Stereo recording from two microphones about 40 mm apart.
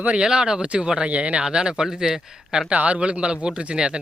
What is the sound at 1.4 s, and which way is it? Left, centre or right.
Speech, centre.